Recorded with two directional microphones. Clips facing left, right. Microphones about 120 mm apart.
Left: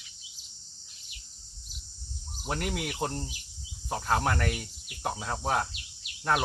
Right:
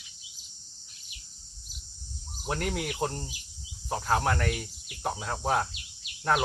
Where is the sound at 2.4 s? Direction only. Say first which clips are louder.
Right 1 dB; 5° left (ahead or behind).